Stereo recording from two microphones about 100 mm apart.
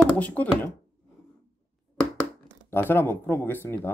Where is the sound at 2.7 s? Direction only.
20° left (ahead or behind).